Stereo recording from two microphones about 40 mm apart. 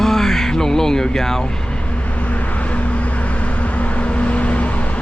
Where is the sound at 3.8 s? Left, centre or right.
Left.